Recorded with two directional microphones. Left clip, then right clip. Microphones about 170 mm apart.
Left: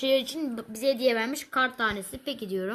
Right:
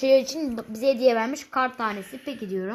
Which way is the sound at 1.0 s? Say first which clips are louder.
Right 4 dB; 10° left (ahead or behind).